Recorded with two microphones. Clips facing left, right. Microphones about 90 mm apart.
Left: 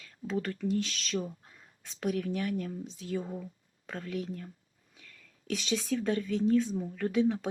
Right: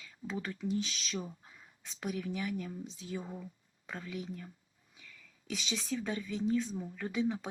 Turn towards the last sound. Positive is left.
turn(degrees=0)  # may be behind; listen again after turning